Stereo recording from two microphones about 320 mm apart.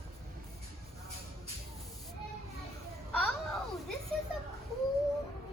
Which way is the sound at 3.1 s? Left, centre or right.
Centre.